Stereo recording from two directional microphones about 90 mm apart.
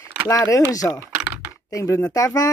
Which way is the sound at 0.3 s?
40° left (ahead or behind).